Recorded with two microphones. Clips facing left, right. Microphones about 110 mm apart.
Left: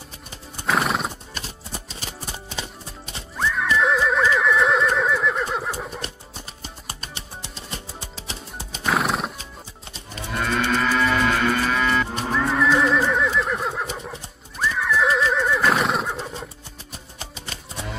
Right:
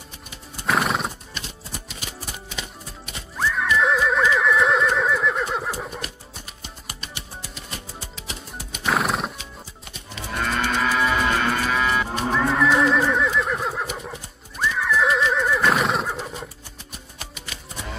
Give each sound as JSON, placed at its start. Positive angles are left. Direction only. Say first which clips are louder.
{"t": 0.7, "sound": "horse", "louder": "even", "side_deg": 0}
{"t": 1.3, "sound": "music", "louder": "left 1 dB", "side_deg": 35}
{"t": 3.3, "sound": "neigh", "louder": "even", "side_deg": 0}
{"t": 5.9, "sound": "music", "louder": "left 1 dB", "side_deg": 30}
{"t": 8.8, "sound": "horse", "louder": "even", "side_deg": 0}
{"t": 10.3, "sound": "moo", "louder": "left 1 dB", "side_deg": 0}
{"t": 16.9, "sound": "music", "louder": "left 2 dB", "side_deg": 30}